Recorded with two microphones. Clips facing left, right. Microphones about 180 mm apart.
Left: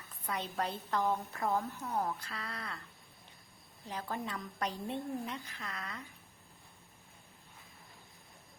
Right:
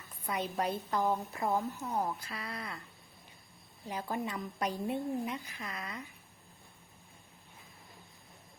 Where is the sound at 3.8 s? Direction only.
10° right (ahead or behind).